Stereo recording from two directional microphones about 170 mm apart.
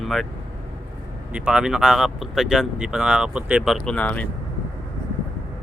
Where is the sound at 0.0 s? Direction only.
Centre (ahead or behind).